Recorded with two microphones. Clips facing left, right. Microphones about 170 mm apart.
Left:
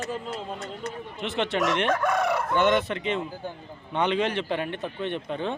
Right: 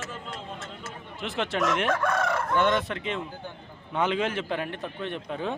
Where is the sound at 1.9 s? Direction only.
15° left (ahead or behind).